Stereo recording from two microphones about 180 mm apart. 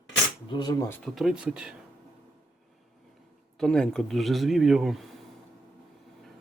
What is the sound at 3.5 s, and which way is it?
Speech, 5° left (ahead or behind).